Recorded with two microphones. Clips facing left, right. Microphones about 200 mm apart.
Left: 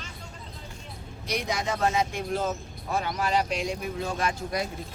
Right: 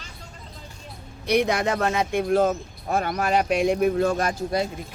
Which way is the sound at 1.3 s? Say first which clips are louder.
Right 8 dB; 60° right (ahead or behind).